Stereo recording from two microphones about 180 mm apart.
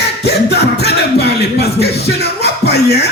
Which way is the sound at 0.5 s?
65° left (ahead or behind).